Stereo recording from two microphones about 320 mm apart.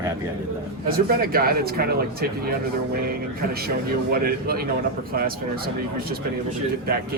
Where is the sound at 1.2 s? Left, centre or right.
Right.